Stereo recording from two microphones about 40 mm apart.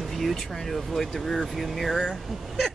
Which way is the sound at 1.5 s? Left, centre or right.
Centre.